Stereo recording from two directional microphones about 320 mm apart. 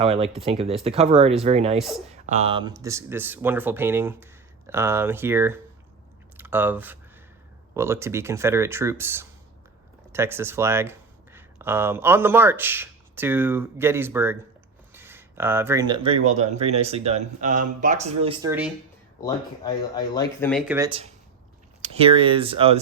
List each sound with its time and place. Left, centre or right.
0.0 s speech: centre
19.2 s speech: centre